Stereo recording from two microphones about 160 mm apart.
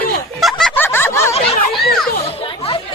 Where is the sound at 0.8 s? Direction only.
15° left (ahead or behind).